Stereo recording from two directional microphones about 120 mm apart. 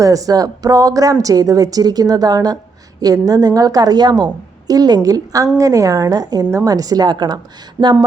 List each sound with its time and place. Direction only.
0.0 s a woman's voice: 30° right (ahead or behind)